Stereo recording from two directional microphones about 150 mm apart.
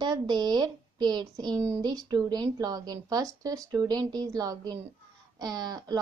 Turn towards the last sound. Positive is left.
turn(degrees=-25)  # may be behind; listen again after turning